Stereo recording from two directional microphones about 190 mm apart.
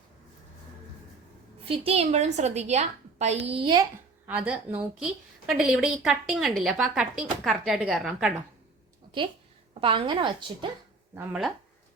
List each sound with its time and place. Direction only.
1.6 s a woman's voice: 30° right (ahead or behind)
4.3 s a woman's voice: 5° right (ahead or behind)
9.8 s a woman's voice: 30° right (ahead or behind)
11.1 s speech: 10° right (ahead or behind)